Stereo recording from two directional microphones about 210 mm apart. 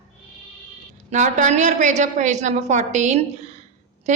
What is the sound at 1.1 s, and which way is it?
A woman's voice, 35° right (ahead or behind).